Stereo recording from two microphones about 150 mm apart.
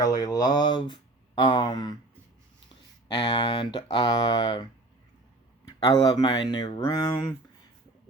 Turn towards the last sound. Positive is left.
turn(degrees=30)  # may be behind; listen again after turning